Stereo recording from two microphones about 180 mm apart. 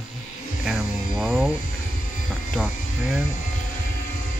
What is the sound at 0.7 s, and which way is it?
Mantra, centre (ahead or behind).